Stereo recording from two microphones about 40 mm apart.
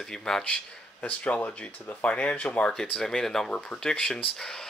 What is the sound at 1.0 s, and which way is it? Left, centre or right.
Speech, left.